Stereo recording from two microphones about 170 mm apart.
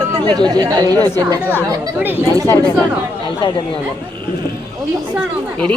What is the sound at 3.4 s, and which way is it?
Speech, 25° left (ahead or behind).